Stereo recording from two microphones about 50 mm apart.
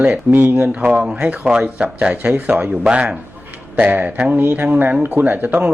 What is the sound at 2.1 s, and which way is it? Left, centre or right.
A man's voice, right.